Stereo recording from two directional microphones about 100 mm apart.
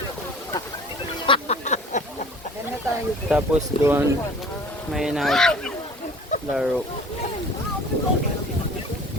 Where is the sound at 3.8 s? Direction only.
20° right (ahead or behind).